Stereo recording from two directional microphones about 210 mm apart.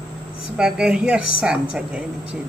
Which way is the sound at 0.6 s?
5° right (ahead or behind).